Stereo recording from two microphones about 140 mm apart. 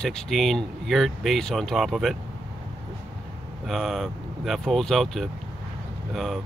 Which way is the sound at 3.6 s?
Centre (ahead or behind).